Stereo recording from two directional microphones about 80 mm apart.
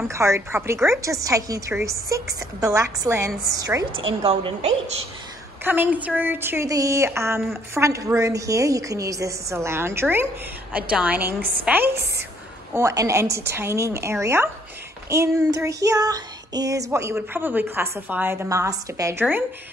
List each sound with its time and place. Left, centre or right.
0.1 s a woman's voice: right
0.8 s child singing: right
1.7 s a woman's voice: right
5.6 s a woman's voice: right
6.7 s a woman's voice: right
10.7 s a woman's voice: centre
12.7 s a woman's voice: right
15.0 s child singing: right
17.1 s a woman's voice: right